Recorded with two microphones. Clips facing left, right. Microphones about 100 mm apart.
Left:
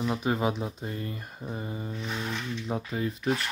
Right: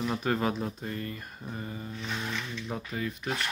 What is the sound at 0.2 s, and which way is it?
Speech, 15° left (ahead or behind).